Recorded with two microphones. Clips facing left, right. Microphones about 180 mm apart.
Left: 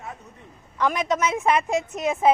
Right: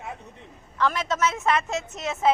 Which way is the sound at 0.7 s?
15° left (ahead or behind).